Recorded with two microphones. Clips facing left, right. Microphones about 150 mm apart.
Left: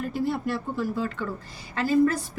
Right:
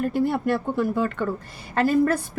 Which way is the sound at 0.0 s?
55° right (ahead or behind).